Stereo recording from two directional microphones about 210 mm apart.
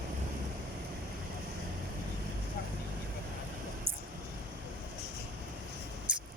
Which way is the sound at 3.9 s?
25° right (ahead or behind).